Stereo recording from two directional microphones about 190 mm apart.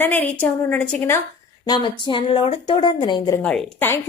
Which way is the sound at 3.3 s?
10° left (ahead or behind).